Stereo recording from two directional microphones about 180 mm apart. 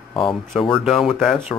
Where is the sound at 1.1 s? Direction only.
Centre (ahead or behind).